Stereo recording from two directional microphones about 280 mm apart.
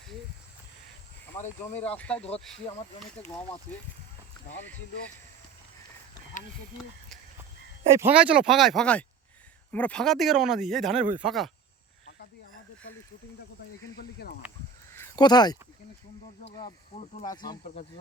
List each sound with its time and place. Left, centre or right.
2.0 s speech: centre
6.3 s speech: left
7.9 s speech: centre
13.9 s speech: left
14.9 s a sound: centre
17.2 s speech: centre